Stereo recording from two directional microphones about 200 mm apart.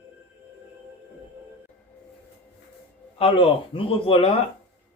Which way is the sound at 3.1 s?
30° left (ahead or behind).